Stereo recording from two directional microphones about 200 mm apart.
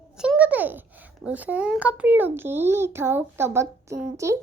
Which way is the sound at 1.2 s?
5° right (ahead or behind).